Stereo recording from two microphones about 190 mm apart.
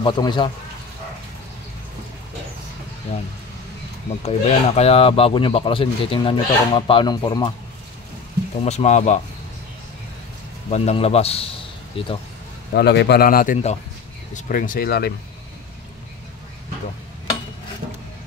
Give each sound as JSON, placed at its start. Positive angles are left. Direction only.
{"t": 0.0, "sound": "speech", "side_deg": 25}
{"t": 4.2, "sound": "speech", "side_deg": 35}
{"t": 8.6, "sound": "a man's voice", "side_deg": 35}
{"t": 10.7, "sound": "a man's voice", "side_deg": 35}
{"t": 12.7, "sound": "a man's voice", "side_deg": 65}